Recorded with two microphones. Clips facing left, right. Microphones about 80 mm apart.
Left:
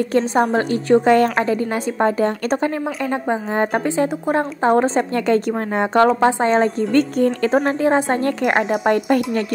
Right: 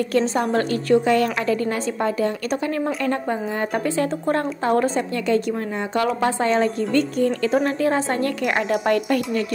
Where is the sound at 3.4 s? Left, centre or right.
Left.